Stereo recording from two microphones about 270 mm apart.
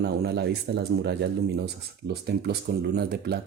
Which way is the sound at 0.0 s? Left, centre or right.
Right.